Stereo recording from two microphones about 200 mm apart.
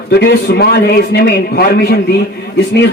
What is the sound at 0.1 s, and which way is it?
A man's voice, 55° left (ahead or behind).